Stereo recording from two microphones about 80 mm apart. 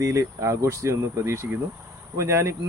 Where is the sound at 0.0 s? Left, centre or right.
Right.